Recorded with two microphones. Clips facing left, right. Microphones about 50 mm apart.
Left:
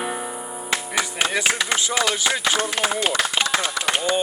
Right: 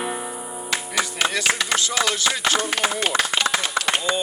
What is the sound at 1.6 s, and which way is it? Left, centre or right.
Speech, centre.